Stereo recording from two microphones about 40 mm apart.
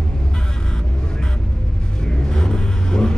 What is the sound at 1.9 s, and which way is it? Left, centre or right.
Vehicle, centre.